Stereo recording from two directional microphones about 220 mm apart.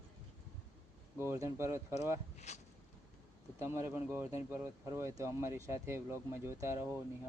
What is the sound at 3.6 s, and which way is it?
Speech, 10° right (ahead or behind).